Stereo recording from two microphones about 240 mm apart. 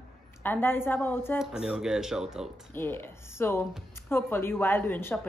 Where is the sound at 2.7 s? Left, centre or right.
Centre.